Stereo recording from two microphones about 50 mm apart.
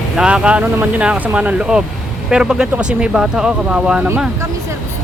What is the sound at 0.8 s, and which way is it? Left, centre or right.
Speech, right.